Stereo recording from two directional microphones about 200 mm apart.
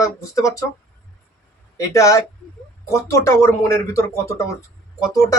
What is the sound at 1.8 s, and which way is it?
Speech, 15° left (ahead or behind).